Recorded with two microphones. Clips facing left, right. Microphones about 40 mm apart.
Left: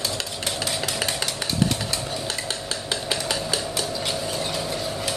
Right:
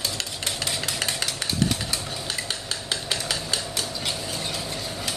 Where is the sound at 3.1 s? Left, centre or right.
Centre.